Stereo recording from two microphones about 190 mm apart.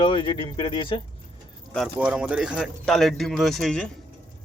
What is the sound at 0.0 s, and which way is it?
Speech, 25° left (ahead or behind).